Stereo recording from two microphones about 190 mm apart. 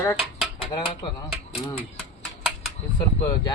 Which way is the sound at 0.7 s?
25° left (ahead or behind).